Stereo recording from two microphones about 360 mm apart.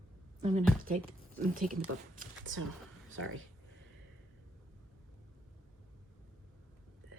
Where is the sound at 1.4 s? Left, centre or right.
Right.